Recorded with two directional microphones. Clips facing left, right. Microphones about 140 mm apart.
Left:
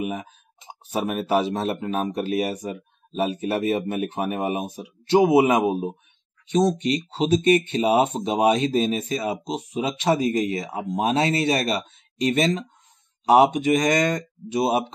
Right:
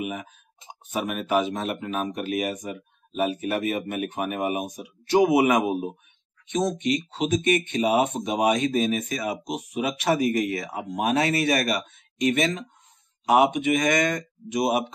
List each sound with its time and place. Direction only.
0.0 s speech: 35° left (ahead or behind)